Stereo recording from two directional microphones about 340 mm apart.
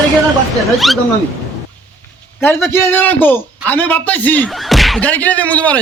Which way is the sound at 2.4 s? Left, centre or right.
Centre.